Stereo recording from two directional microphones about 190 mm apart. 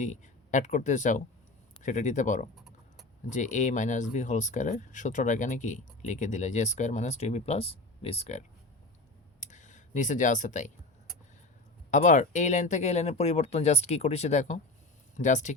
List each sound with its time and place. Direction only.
0.0 s speech: 40° left (ahead or behind)
2.6 s vehicle: centre (ahead or behind)
3.2 s speech: 40° left (ahead or behind)
9.4 s a sound: 40° left (ahead or behind)
11.9 s speech: 40° left (ahead or behind)